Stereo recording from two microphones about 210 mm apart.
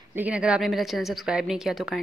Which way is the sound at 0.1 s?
5° right (ahead or behind).